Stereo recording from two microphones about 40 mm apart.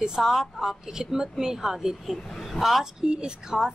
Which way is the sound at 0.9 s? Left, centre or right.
Centre.